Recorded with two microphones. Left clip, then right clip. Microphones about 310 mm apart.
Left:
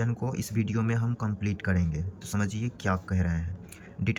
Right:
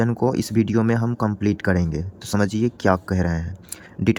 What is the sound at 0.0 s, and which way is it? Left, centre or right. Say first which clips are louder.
A man's voice: right 13 dB; centre.